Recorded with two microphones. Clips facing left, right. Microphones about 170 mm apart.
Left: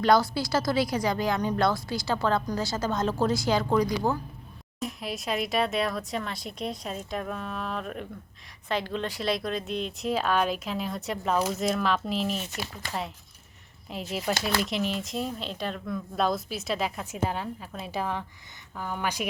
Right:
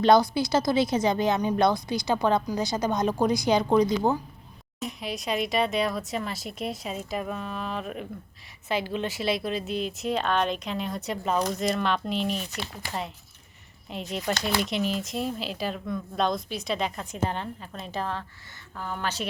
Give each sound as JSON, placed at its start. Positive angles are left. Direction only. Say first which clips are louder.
{"t": 0.0, "sound": "a woman's voice", "louder": "right 3 dB", "side_deg": -20}
{"t": 4.8, "sound": "speech", "louder": "even", "side_deg": 0}
{"t": 13.9, "sound": "speech", "louder": "even", "side_deg": 5}